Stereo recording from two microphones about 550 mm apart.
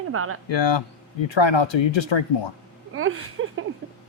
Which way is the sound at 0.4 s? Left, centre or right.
Left.